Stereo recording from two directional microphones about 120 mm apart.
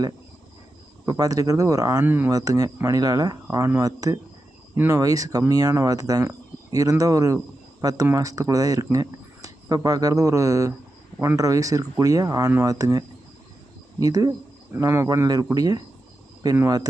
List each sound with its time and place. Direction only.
1.0 s speech: 30° right (ahead or behind)
2.0 s speech: 15° right (ahead or behind)
2.3 s speech: 30° right (ahead or behind)